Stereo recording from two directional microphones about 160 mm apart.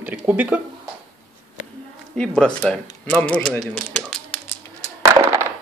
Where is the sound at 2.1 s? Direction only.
5° left (ahead or behind).